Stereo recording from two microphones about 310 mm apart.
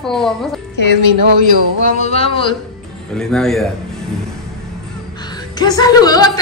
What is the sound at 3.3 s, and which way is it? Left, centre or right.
Speech, centre.